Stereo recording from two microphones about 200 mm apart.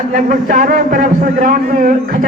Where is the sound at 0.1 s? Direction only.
40° right (ahead or behind).